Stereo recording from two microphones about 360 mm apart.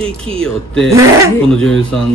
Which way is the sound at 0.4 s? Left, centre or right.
Centre.